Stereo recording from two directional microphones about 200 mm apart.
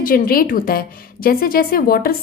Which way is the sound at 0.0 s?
45° left (ahead or behind).